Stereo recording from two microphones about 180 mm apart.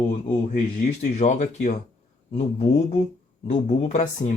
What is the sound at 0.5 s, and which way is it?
Speech, 45° left (ahead or behind).